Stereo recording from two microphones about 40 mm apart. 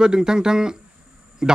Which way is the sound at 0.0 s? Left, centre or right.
Centre.